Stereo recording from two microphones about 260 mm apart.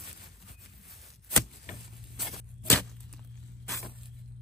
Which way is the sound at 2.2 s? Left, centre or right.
Centre.